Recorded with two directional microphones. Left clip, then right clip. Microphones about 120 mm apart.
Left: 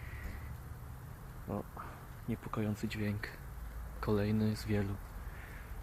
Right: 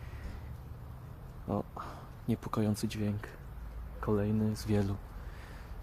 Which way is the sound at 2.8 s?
25° right (ahead or behind).